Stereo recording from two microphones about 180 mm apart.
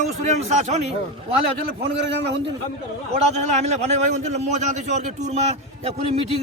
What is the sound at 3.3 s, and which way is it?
A man's voice, 40° right (ahead or behind).